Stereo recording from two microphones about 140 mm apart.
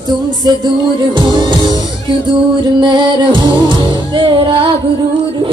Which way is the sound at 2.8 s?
35° right (ahead or behind).